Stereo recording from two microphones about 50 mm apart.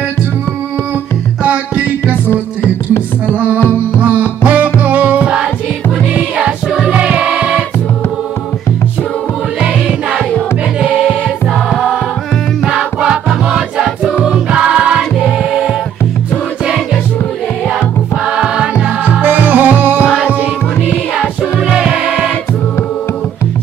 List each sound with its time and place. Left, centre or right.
2.2 s music: left
3.3 s music: right; by 7.6 s centre
9.6 s music: centre
12.6 s music: centre
14.1 s choir: centre
17.7 s music: centre
19.2 s music: right
21.6 s music: centre